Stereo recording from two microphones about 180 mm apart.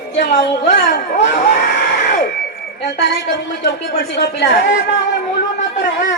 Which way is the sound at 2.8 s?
75° left (ahead or behind).